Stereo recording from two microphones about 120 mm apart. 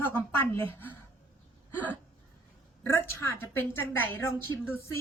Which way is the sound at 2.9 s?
20° left (ahead or behind).